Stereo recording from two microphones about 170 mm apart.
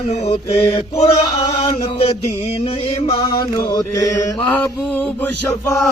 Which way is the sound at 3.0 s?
30° left (ahead or behind).